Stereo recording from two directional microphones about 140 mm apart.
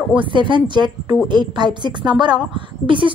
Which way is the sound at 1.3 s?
35° right (ahead or behind).